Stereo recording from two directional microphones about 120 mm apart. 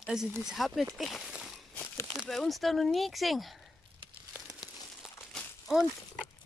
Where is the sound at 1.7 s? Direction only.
15° left (ahead or behind).